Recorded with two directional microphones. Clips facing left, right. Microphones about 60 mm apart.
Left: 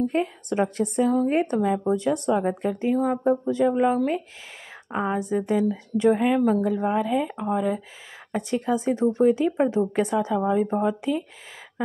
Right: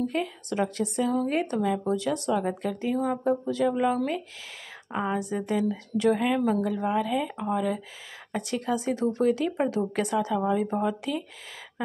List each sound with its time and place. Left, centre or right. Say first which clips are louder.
0.1 s speech: left 4 dB; left